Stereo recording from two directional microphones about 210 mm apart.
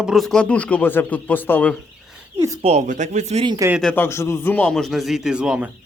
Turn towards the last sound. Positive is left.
turn(degrees=-5)  # may be behind; listen again after turning